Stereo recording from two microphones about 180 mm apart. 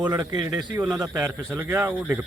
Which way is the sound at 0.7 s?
10° right (ahead or behind).